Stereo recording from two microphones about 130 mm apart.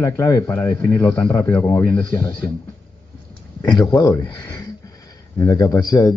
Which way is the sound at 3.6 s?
30° left (ahead or behind).